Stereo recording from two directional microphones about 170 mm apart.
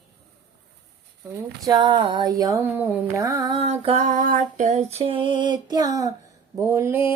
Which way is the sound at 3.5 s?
35° right (ahead or behind).